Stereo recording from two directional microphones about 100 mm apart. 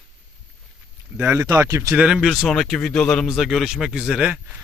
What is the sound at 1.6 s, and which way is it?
Speech, 30° right (ahead or behind).